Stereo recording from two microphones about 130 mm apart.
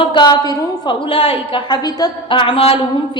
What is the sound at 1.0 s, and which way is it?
A woman's voice, 45° left (ahead or behind).